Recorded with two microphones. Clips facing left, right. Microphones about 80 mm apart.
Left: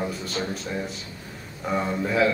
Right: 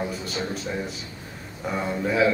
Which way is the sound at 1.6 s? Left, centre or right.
Centre.